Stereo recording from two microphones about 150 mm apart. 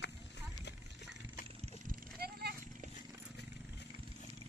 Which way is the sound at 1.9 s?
90° right.